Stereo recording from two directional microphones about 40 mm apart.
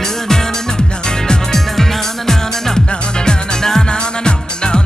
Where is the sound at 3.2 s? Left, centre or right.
Centre.